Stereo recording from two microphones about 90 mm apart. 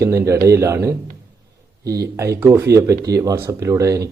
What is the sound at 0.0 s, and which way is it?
Speech, 35° right (ahead or behind).